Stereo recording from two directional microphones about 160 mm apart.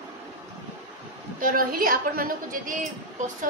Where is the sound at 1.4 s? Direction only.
60° right (ahead or behind).